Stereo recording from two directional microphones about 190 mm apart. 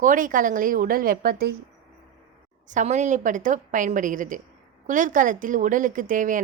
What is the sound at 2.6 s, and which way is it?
A woman's voice, 40° right (ahead or behind).